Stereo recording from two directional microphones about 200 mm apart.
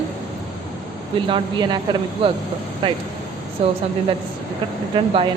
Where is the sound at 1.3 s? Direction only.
20° right (ahead or behind).